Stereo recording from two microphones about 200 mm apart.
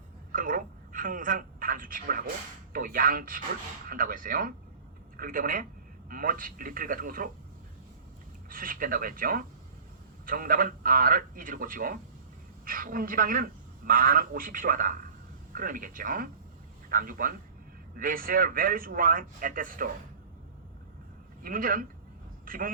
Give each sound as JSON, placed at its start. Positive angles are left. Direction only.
{"t": 0.3, "sound": "a sound", "side_deg": -45}
{"t": 2.7, "sound": "speech", "side_deg": -45}
{"t": 8.4, "sound": "speech", "side_deg": -45}
{"t": 21.4, "sound": "speech", "side_deg": -45}